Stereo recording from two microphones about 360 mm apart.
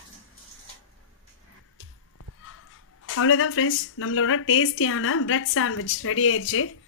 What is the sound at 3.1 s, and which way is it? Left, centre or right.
A woman's voice, left.